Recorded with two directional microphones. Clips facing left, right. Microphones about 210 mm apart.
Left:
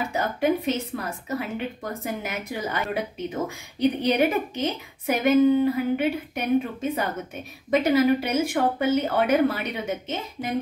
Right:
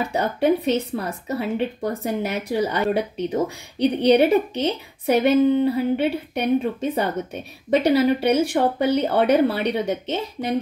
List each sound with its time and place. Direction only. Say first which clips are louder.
0.1 s a woman's voice: right 4 dB; 35° right (ahead or behind)